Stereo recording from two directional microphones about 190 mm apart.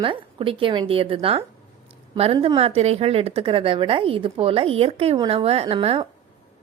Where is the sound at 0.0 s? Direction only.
30° right (ahead or behind).